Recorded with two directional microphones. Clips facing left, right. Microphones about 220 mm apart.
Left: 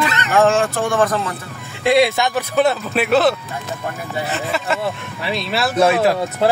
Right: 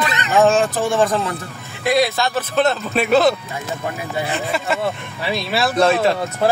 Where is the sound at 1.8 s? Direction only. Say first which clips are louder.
Left 3 dB; 25° left (ahead or behind); by 4.8 s centre (ahead or behind).